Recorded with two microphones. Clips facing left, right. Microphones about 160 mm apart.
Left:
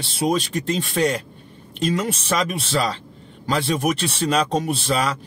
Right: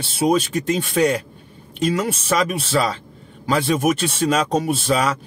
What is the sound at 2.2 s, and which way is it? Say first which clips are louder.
Speech: right 3 dB; centre (ahead or behind).